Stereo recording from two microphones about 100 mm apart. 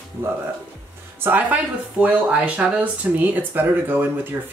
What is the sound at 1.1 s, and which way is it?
Speech, 20° right (ahead or behind).